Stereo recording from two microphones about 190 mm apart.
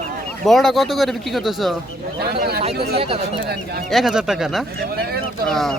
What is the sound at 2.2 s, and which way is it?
Speech, 55° right (ahead or behind).